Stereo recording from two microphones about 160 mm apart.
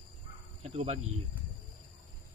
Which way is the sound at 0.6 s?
40° right (ahead or behind).